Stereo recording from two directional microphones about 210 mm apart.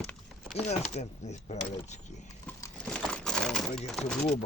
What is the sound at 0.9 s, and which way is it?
Speech, 35° left (ahead or behind).